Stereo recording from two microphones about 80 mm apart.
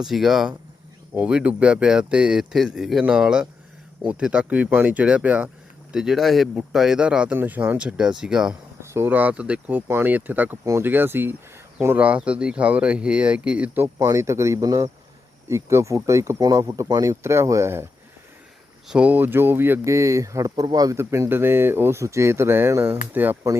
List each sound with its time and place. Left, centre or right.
0.0 s speech: centre
1.2 s speech: centre
5.9 s speech: centre
8.8 s a sound: right
9.0 s speech: right
11.9 s speech: centre
13.7 s speech: right
18.9 s speech: centre
19.8 s speech: right